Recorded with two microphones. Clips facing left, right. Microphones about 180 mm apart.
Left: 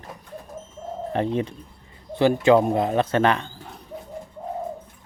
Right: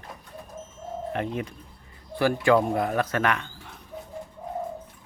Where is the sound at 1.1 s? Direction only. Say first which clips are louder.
Left 8 dB; 30° left (ahead or behind).